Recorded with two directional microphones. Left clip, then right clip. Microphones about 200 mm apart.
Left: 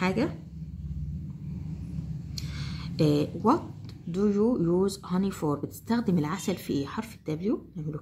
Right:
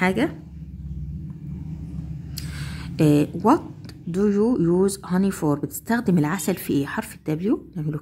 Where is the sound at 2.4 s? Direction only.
35° right (ahead or behind).